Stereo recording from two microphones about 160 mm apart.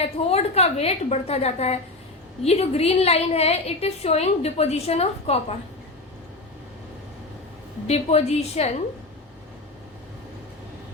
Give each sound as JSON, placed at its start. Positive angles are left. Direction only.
{"t": 0.0, "sound": "a woman's voice", "side_deg": 40}
{"t": 7.9, "sound": "a woman's voice", "side_deg": 40}